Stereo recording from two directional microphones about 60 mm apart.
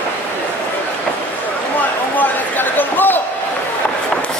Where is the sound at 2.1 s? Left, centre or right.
Left.